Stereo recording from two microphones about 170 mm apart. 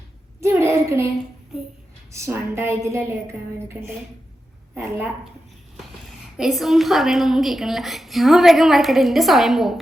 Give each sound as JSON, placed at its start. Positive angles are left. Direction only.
{"t": 0.4, "sound": "a sound", "side_deg": -15}
{"t": 2.1, "sound": "a woman's voice", "side_deg": -15}
{"t": 6.3, "sound": "a woman's voice", "side_deg": 0}